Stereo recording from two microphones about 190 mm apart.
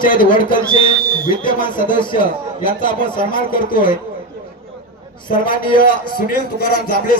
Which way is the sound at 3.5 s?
50° left (ahead or behind).